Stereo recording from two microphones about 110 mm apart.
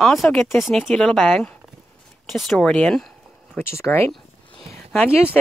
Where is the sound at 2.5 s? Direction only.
5° left (ahead or behind).